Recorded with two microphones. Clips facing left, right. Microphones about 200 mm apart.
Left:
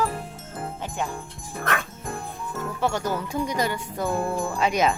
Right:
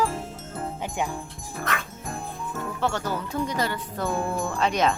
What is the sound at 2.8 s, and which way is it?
Speech, 10° left (ahead or behind).